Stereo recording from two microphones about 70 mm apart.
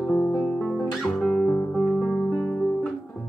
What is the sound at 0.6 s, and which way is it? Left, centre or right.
Music, centre.